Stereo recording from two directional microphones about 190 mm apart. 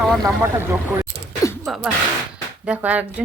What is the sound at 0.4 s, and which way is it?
Speech, 10° right (ahead or behind).